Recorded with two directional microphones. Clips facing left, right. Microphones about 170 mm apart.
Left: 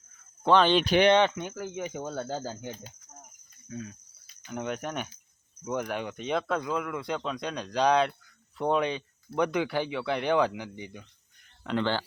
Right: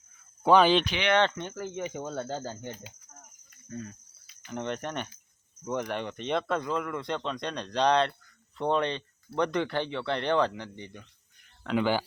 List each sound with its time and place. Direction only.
0.4 s speech: 10° right (ahead or behind)
0.9 s speech: 40° left (ahead or behind)
1.1 s speech: 10° left (ahead or behind)
11.6 s speech: 5° right (ahead or behind)